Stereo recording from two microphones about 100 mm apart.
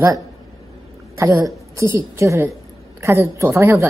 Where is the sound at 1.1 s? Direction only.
30° right (ahead or behind).